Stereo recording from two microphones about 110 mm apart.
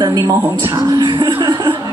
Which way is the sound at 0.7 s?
35° right (ahead or behind).